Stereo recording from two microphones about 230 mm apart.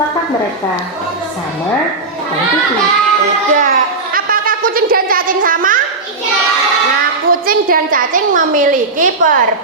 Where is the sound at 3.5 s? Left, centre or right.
Right.